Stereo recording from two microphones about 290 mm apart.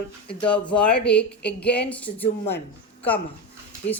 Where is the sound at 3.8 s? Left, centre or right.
Left.